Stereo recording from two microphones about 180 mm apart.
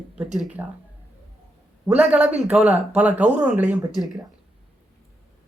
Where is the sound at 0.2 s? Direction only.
5° right (ahead or behind).